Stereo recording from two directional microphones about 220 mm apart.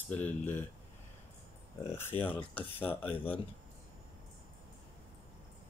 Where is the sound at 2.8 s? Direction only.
25° left (ahead or behind).